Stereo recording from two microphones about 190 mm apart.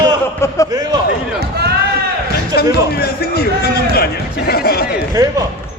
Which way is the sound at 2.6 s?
55° left (ahead or behind).